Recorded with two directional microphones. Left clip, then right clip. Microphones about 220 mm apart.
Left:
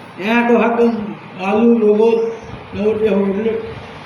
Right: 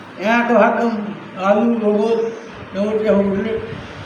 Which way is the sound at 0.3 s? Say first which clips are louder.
Even; 10° right (ahead or behind).